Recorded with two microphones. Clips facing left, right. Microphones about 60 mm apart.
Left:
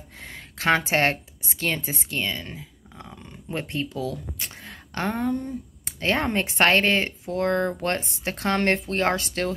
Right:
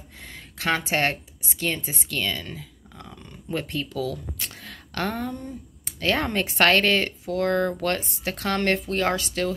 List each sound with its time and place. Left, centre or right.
0.2 s speech: left
2.2 s a sound: centre
5.9 s a woman's voice: left